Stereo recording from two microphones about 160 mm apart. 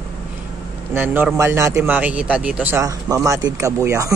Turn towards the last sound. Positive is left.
turn(degrees=-20)  # may be behind; listen again after turning